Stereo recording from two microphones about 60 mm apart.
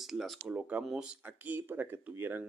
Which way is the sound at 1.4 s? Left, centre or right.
Right.